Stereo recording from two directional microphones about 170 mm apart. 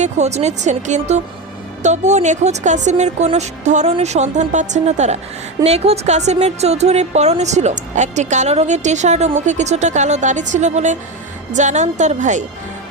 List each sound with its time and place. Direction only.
0.0 s a woman's voice: 40° right (ahead or behind)